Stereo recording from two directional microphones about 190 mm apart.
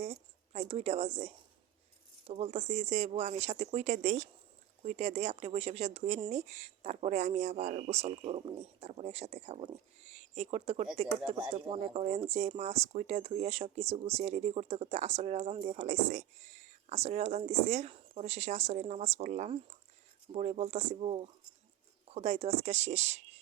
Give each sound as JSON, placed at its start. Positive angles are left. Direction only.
{"t": 0.5, "sound": "speech", "side_deg": -30}